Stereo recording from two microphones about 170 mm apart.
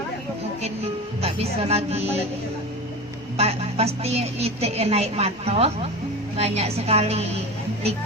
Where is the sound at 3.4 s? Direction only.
35° right (ahead or behind).